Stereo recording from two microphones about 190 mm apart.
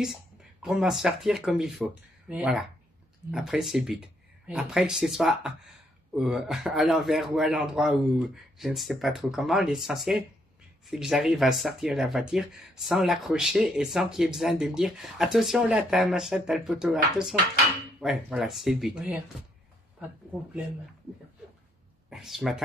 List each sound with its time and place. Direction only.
0.0 s speech: 5° right (ahead or behind)
22.1 s speech: centre (ahead or behind)